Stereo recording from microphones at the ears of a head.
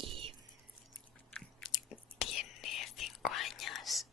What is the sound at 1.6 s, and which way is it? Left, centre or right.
Whispering, left.